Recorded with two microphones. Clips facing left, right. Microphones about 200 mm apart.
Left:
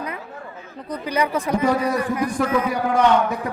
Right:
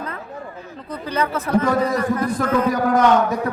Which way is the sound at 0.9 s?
15° left (ahead or behind).